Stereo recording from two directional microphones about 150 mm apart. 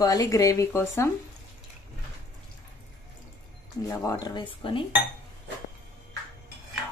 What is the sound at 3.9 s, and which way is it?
Speech, 20° left (ahead or behind).